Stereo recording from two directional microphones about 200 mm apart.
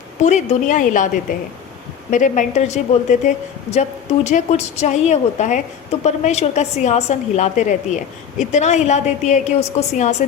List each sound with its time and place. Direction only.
0.2 s a woman's voice: 35° left (ahead or behind)